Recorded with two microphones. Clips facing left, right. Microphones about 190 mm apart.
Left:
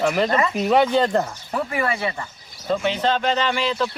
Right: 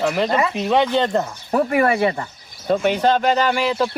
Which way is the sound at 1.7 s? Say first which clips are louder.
Right 7 dB; 50° right (ahead or behind).